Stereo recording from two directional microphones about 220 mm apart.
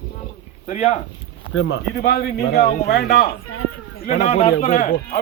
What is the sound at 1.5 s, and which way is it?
A man's voice, 55° left (ahead or behind).